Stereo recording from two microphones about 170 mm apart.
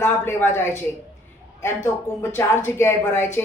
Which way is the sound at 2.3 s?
15° left (ahead or behind).